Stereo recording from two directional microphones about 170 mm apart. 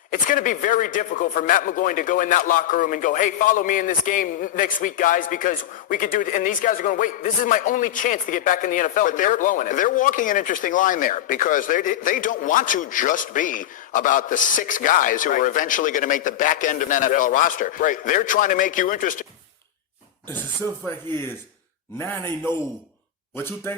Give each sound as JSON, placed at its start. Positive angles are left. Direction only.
{"t": 0.1, "sound": "a man's voice", "side_deg": 50}
{"t": 21.1, "sound": "a man's voice", "side_deg": 15}